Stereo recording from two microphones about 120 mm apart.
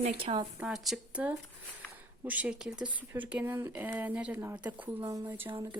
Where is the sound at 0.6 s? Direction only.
5° right (ahead or behind).